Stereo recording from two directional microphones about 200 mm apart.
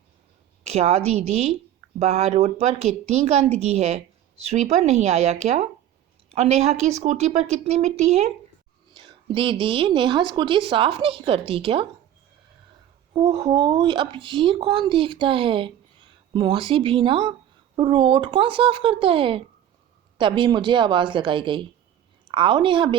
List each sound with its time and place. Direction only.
0.6 s a woman's voice: 30° right (ahead or behind)
13.1 s speech: 20° right (ahead or behind)